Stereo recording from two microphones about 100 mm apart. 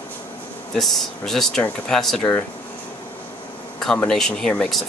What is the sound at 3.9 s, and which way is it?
Speech, 5° left (ahead or behind).